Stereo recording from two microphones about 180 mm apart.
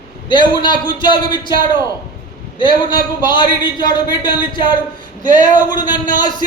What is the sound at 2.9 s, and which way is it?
A man's voice, 25° left (ahead or behind).